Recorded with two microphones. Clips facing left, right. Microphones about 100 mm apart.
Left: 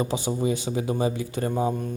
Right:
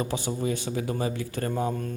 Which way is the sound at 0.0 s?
20° left (ahead or behind).